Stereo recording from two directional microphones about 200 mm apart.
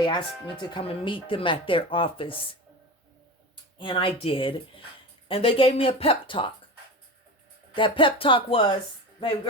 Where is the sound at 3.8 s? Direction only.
25° left (ahead or behind).